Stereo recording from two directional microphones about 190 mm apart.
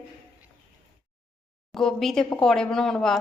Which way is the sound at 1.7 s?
Centre (ahead or behind).